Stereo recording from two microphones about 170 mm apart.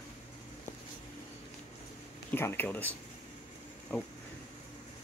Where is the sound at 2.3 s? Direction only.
15° left (ahead or behind).